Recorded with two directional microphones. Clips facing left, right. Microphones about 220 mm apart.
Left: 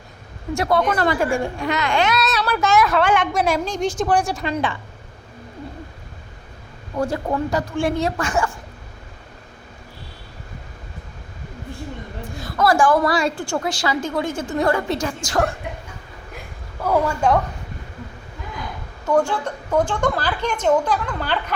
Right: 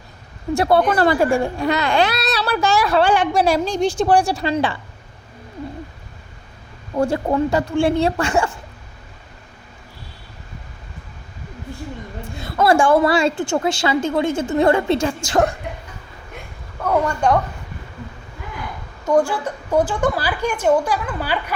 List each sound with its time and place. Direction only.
0.5 s speech: 30° right (ahead or behind)
7.0 s a woman's voice: 30° right (ahead or behind)
12.4 s a woman's voice: 25° right (ahead or behind)
16.8 s a woman's voice: 5° left (ahead or behind)
19.2 s a woman's voice: 10° right (ahead or behind)